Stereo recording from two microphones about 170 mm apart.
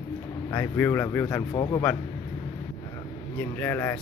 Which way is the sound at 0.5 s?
15° left (ahead or behind).